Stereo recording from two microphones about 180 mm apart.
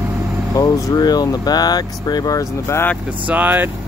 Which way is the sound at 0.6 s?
20° left (ahead or behind).